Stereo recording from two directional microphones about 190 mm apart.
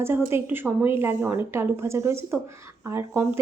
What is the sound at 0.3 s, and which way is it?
A woman's voice, 10° right (ahead or behind).